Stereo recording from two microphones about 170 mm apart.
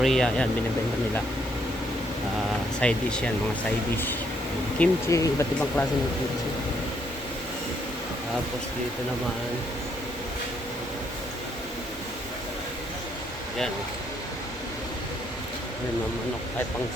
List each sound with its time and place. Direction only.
0.0 s speech: 5° left (ahead or behind)
2.8 s speech: 5° left (ahead or behind)
4.8 s speech: 15° left (ahead or behind)